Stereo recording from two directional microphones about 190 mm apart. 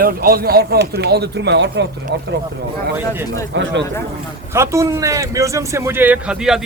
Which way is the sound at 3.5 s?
70° right (ahead or behind).